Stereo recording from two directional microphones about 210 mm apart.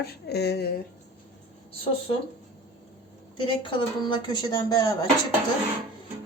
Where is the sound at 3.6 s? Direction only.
25° left (ahead or behind).